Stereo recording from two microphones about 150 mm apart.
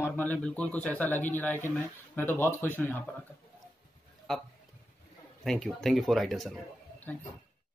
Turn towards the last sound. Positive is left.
turn(degrees=0)  # may be behind; listen again after turning